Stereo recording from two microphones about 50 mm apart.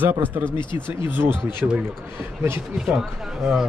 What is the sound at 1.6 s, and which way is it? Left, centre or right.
Speech, right.